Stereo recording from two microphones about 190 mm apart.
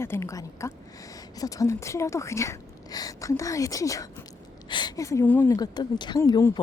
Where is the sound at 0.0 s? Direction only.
15° left (ahead or behind).